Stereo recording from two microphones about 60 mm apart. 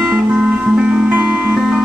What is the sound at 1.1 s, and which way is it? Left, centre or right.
Music, right.